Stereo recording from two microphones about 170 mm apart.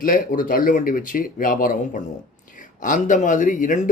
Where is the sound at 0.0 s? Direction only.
55° left (ahead or behind).